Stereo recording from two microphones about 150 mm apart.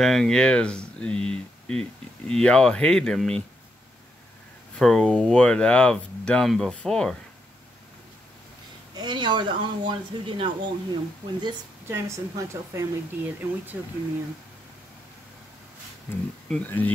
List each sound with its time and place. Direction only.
0.0 s speech: centre (ahead or behind)
4.7 s speech: 5° left (ahead or behind)
8.9 s speech: 30° right (ahead or behind)
11.9 s speech: 15° right (ahead or behind)
16.1 s speech: 15° left (ahead or behind)